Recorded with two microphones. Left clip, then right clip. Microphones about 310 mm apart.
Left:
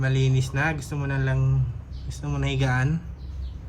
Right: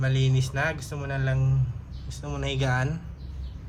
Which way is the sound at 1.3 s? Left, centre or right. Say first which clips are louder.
Left 2 dB; right.